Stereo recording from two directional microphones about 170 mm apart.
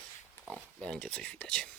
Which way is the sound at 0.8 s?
5° left (ahead or behind).